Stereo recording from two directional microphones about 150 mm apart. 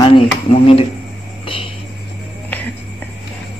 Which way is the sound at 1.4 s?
35° left (ahead or behind).